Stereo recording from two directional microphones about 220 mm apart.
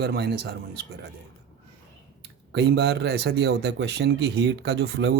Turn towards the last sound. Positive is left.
turn(degrees=-50)  # may be behind; listen again after turning